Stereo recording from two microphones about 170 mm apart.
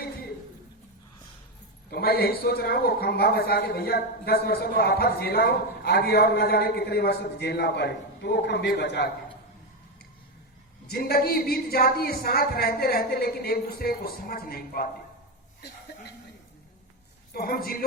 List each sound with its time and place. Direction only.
1.9 s a woman's voice: 65° left (ahead or behind); by 9.0 s 85° left
10.8 s a woman's voice: 70° left (ahead or behind)
17.3 s a woman's voice: 60° left (ahead or behind)